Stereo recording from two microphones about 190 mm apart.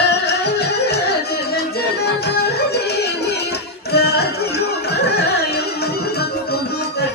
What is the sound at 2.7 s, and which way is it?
Music, 60° left (ahead or behind).